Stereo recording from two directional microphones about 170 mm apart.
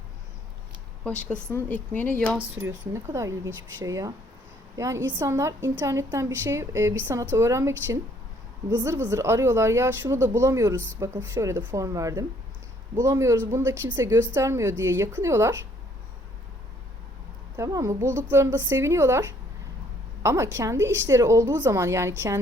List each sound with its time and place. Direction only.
1.0 s speech: 5° left (ahead or behind)
2.6 s speech: 15° right (ahead or behind)
8.8 s speech: 15° right (ahead or behind)
17.6 s speech: 20° right (ahead or behind)